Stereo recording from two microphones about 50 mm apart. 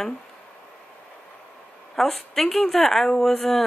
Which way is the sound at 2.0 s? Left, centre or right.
Centre.